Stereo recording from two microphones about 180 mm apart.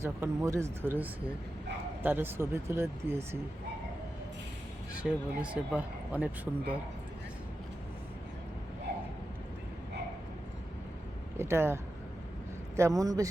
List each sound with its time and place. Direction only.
0.0 s speech: 15° right (ahead or behind)
5.0 s speech: 5° right (ahead or behind)
11.3 s a man's voice: 15° right (ahead or behind)